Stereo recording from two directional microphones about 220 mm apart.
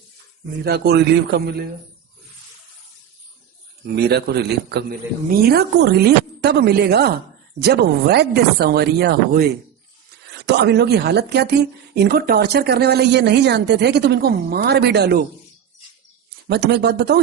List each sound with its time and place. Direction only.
0.6 s speech: 45° right (ahead or behind)
3.9 s speech: 50° right (ahead or behind)
16.5 s speech: 50° right (ahead or behind)